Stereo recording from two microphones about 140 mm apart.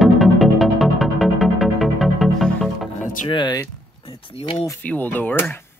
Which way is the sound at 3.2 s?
35° left (ahead or behind).